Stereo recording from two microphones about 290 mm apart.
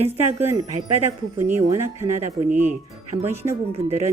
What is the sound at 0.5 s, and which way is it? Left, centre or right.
Speech, right.